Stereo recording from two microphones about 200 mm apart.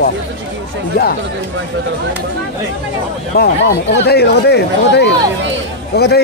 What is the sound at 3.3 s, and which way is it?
Speech, 55° left (ahead or behind).